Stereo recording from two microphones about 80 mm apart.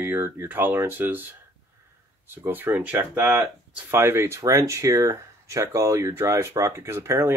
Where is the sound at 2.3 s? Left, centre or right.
Right.